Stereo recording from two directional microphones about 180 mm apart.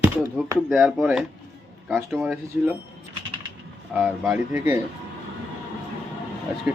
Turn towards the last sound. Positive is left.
turn(degrees=-5)  # may be behind; listen again after turning